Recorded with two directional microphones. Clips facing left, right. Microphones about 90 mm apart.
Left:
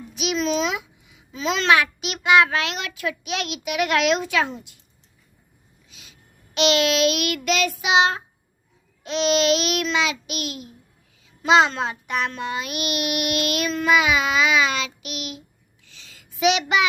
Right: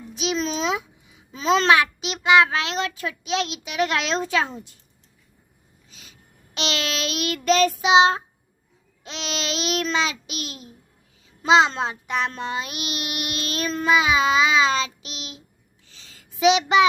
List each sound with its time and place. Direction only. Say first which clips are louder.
0.1 s a child's voice: left 2 dB; 30° right (ahead or behind)
5.9 s child singing: right 1 dB; 40° right (ahead or behind)
9.3 s a child's voice: left 5 dB; 25° right (ahead or behind)
12.3 s child singing: left 1 dB; 30° right (ahead or behind)